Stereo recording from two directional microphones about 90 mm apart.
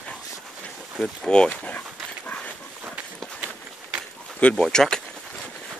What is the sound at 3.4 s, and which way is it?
Run, 15° right (ahead or behind).